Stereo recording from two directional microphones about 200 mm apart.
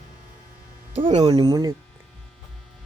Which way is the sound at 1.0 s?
20° right (ahead or behind).